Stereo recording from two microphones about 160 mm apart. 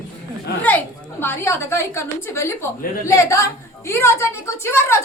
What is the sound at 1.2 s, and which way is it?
A woman's voice, 15° left (ahead or behind).